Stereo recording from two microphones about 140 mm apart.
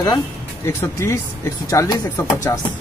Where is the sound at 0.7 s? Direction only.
20° left (ahead or behind).